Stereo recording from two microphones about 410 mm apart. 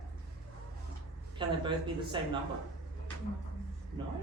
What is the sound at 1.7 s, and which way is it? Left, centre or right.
Speech, centre.